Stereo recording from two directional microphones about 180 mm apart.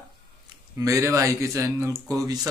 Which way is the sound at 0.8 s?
15° right (ahead or behind).